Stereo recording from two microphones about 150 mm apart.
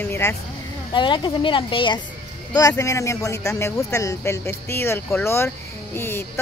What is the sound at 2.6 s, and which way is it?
Speech, 20° left (ahead or behind).